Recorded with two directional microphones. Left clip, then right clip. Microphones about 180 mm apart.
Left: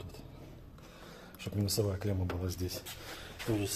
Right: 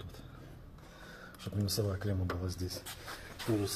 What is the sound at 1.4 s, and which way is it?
Speech, 5° left (ahead or behind).